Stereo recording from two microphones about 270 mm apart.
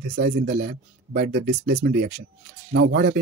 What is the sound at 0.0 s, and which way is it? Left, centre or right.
Speech, right.